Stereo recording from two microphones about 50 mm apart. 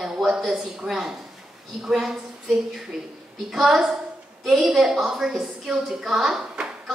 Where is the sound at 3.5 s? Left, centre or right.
Centre.